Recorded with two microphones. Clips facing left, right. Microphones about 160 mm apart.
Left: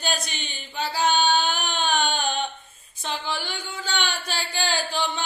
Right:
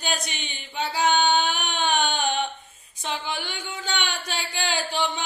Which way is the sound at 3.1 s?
10° right (ahead or behind).